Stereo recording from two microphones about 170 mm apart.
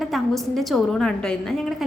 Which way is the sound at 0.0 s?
Centre (ahead or behind).